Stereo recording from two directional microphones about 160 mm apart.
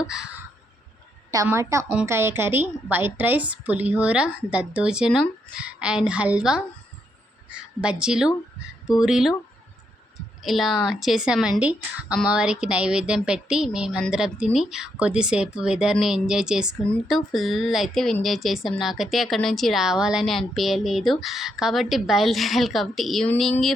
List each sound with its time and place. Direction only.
0.0 s caw: 5° right (ahead or behind)
1.5 s a woman's voice: 20° right (ahead or behind); by 23.7 s centre (ahead or behind)